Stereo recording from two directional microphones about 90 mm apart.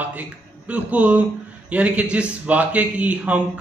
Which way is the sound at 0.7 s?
15° right (ahead or behind).